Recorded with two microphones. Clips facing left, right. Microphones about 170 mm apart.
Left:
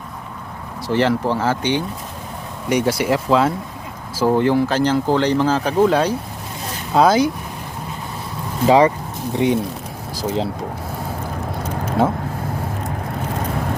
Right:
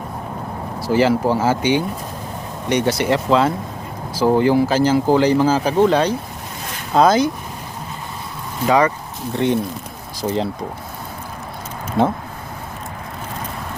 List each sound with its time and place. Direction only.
0.9 s speech: 5° right (ahead or behind)
2.6 s speech: 5° left (ahead or behind)
8.6 s speech: 25° left (ahead or behind)
9.3 s speech: 10° left (ahead or behind)
10.2 s speech: centre (ahead or behind)